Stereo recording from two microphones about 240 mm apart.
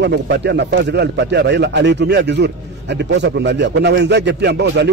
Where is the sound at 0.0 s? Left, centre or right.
Right.